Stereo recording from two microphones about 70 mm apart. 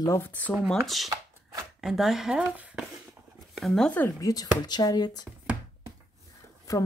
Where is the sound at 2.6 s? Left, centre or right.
Centre.